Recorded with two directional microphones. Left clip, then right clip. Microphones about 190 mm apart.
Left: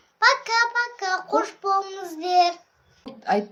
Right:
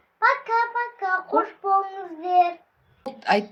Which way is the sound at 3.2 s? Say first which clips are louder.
Right 2 dB; centre (ahead or behind).